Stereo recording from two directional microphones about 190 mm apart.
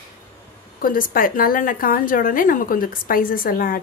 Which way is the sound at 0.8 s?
45° left (ahead or behind).